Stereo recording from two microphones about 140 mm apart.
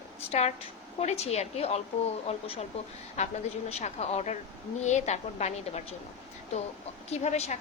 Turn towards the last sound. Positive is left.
turn(degrees=50)  # may be behind; listen again after turning